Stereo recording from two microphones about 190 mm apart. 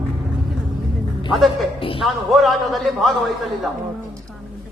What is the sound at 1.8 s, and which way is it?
Speech, 30° left (ahead or behind).